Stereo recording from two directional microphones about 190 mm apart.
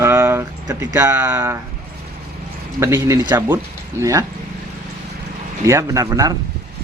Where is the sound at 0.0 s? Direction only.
15° right (ahead or behind).